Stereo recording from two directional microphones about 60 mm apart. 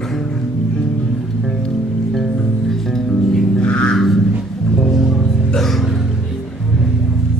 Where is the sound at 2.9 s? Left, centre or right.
Centre.